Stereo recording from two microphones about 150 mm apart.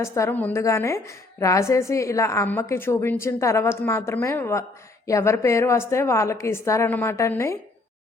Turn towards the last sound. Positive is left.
turn(degrees=20)  # may be behind; listen again after turning